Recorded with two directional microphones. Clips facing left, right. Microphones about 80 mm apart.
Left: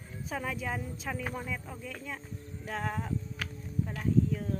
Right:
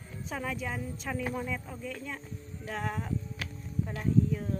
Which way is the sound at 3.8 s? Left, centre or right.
Centre.